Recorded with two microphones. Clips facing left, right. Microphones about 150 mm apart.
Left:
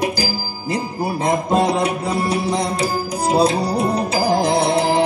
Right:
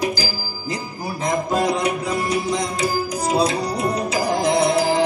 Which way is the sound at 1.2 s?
30° left (ahead or behind).